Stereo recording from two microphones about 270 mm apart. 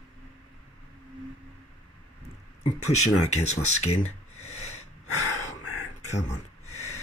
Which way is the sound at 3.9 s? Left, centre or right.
Left.